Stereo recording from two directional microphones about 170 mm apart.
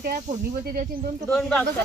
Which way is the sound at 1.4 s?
5° left (ahead or behind).